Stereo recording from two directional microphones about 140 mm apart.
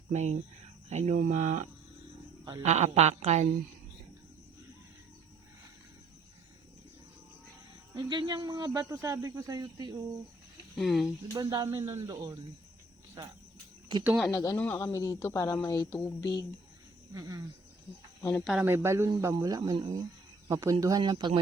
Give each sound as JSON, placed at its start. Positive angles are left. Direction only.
{"t": 0.1, "sound": "speech", "side_deg": -55}
{"t": 2.6, "sound": "a woman's voice", "side_deg": -55}
{"t": 7.9, "sound": "speech", "side_deg": -35}
{"t": 10.8, "sound": "speech", "side_deg": 0}
{"t": 11.3, "sound": "speech", "side_deg": -30}
{"t": 13.9, "sound": "speech", "side_deg": -35}
{"t": 14.3, "sound": "speech", "side_deg": 20}
{"t": 15.9, "sound": "speech", "side_deg": 20}
{"t": 17.2, "sound": "speech", "side_deg": -25}
{"t": 18.2, "sound": "speech", "side_deg": 15}
{"t": 18.6, "sound": "speech", "side_deg": -15}